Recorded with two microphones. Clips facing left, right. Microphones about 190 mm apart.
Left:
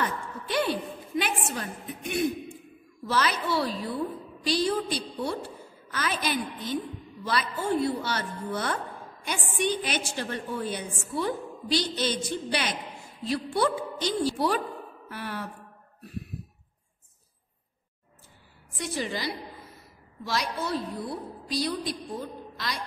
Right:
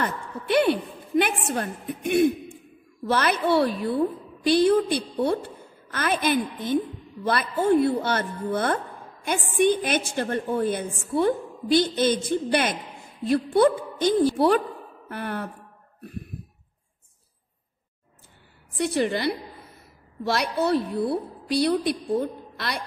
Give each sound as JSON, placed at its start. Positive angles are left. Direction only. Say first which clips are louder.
{"t": 0.0, "sound": "a sound", "louder": "right 2 dB", "side_deg": -60}
{"t": 3.1, "sound": "a woman's voice", "louder": "right 5 dB", "side_deg": -55}
{"t": 18.8, "sound": "a woman's voice", "louder": "right 8 dB", "side_deg": -60}